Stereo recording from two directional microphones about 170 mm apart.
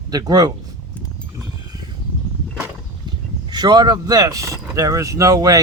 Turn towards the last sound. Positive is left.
turn(degrees=-20)  # may be behind; listen again after turning